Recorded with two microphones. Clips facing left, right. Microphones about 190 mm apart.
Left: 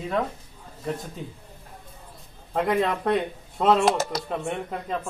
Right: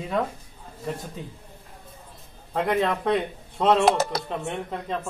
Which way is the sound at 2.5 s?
Centre (ahead or behind).